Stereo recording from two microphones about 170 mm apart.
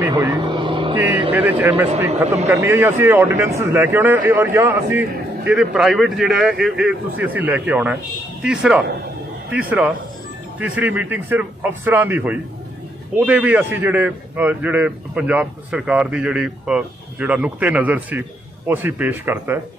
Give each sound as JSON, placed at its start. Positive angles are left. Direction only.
{"t": 0.1, "sound": "speech", "side_deg": -25}
{"t": 0.9, "sound": "a man's voice", "side_deg": -10}